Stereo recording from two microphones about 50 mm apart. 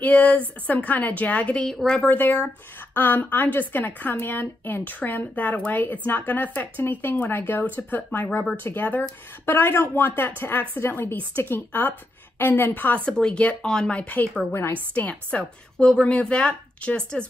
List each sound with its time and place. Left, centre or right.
0.0 s a woman's voice: left
1.6 s speech: centre
2.0 s a woman's voice: left
8.6 s a woman's voice: left
13.1 s speech: centre
13.9 s a woman's voice: left